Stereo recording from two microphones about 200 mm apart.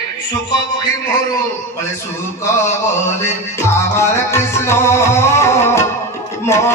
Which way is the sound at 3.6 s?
15° left (ahead or behind).